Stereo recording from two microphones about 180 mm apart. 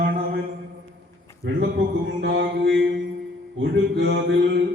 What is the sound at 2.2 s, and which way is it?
Mantra, 70° right (ahead or behind).